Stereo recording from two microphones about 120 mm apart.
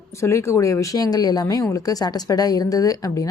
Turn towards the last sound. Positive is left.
turn(degrees=30)  # may be behind; listen again after turning